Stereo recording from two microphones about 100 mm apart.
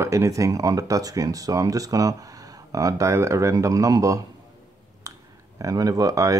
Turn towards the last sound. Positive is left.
turn(degrees=-35)  # may be behind; listen again after turning